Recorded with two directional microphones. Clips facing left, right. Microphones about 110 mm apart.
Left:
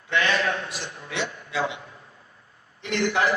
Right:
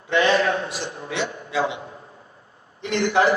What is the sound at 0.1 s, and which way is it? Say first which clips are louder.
A man's voice: right 5 dB; 25° right (ahead or behind).